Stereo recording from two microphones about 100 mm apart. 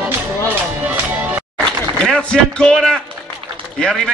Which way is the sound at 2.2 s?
10° left (ahead or behind).